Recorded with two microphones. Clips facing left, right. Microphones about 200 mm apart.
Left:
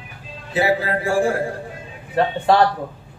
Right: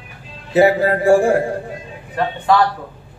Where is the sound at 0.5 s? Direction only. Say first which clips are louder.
Right 6 dB; 45° right (ahead or behind).